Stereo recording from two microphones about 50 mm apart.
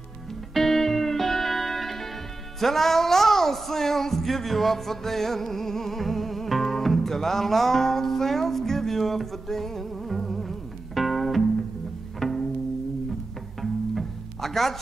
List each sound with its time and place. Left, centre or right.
0.6 s music: centre
2.6 s a sound: centre
11.0 s music: centre
12.2 s pizzicato: centre
13.6 s music: centre